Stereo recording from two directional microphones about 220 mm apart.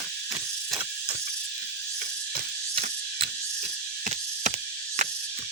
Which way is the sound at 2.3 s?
25° right (ahead or behind).